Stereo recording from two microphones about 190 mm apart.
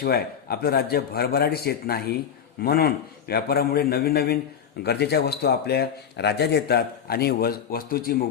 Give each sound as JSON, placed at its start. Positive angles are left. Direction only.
{"t": 0.0, "sound": "a man's voice", "side_deg": 55}